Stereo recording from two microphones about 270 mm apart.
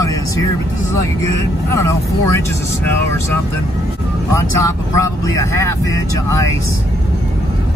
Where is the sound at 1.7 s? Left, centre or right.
Centre.